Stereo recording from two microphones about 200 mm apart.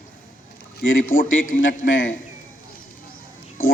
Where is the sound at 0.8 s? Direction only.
80° left.